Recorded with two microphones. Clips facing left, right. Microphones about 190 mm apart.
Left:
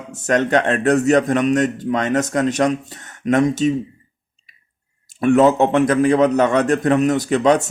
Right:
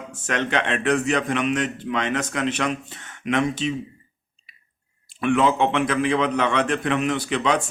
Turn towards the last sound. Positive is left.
turn(degrees=45)  # may be behind; listen again after turning